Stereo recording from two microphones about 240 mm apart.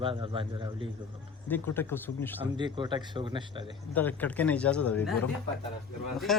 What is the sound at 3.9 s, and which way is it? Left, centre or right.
Speech, centre.